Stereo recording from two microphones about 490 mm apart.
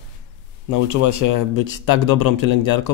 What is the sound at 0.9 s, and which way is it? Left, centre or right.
Speech, left.